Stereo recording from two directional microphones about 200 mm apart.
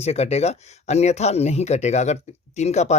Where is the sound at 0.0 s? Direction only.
30° left (ahead or behind).